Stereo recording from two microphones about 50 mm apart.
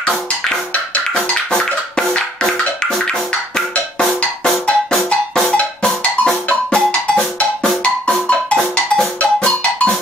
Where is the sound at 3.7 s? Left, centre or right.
Left.